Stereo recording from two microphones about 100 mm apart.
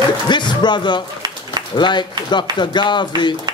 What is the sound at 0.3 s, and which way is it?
Music, 50° left (ahead or behind).